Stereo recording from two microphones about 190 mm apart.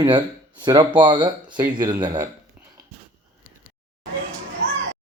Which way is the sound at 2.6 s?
10° right (ahead or behind).